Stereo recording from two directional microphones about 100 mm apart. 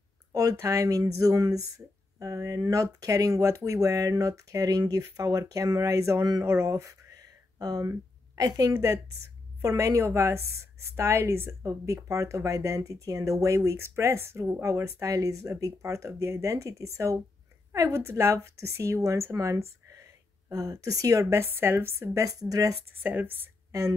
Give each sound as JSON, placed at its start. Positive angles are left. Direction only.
{"t": 0.3, "sound": "a woman's voice", "side_deg": -35}
{"t": 23.0, "sound": "a woman's voice", "side_deg": -20}